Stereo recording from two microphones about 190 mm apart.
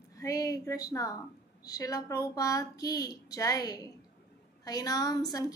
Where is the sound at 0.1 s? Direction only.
20° left (ahead or behind).